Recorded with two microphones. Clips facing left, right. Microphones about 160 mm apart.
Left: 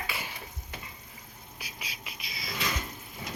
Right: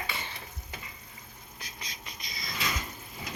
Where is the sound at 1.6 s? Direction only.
10° left (ahead or behind).